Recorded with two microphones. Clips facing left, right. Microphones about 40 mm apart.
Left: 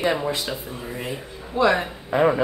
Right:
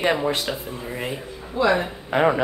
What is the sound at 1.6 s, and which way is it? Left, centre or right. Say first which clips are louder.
Speech: left 2 dB; left.